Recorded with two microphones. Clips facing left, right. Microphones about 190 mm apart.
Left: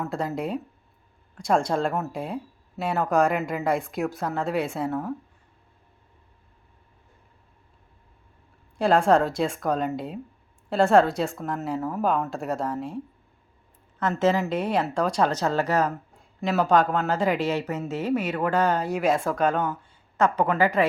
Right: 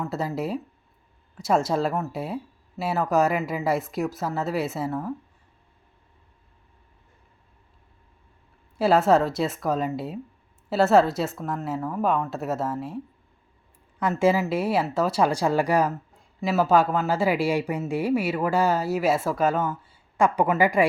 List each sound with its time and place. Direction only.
0.0 s speech: centre (ahead or behind)
8.8 s speech: 5° right (ahead or behind)
14.0 s speech: 10° right (ahead or behind)